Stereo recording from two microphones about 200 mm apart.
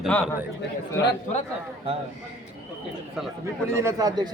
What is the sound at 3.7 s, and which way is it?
Speech, 15° right (ahead or behind).